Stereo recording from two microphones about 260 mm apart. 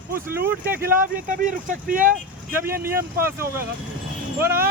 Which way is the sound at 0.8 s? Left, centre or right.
Right.